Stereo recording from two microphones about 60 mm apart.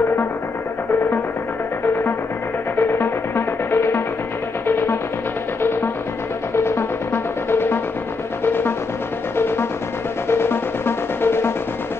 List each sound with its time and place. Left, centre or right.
2.9 s music: left
10.2 s music: left